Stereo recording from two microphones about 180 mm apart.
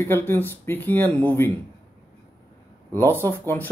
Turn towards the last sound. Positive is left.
turn(degrees=10)  # may be behind; listen again after turning